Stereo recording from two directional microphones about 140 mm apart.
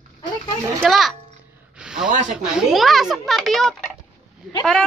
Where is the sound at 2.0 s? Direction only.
65° right (ahead or behind).